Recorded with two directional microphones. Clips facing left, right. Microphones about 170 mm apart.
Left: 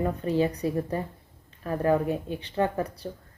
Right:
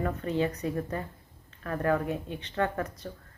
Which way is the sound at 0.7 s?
25° left (ahead or behind).